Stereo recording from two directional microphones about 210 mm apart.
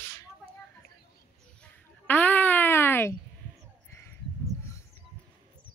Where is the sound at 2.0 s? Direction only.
10° left (ahead or behind).